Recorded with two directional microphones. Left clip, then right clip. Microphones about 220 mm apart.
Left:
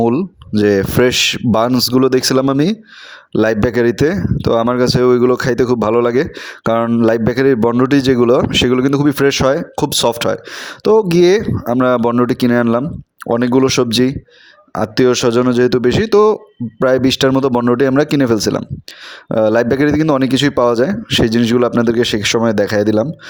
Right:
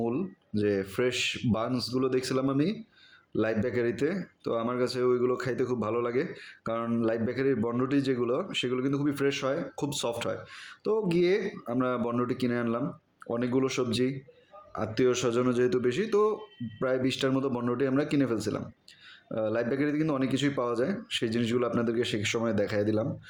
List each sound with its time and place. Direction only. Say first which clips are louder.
0.0 s speech: left 16 dB; 50° left (ahead or behind)